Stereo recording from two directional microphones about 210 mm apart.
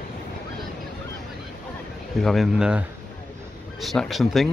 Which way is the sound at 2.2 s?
Centre (ahead or behind).